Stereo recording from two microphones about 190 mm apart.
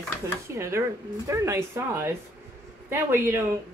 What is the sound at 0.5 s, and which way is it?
A woman's voice, 15° right (ahead or behind).